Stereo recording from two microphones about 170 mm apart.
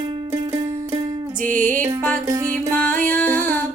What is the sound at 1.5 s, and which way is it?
Music, 50° right (ahead or behind).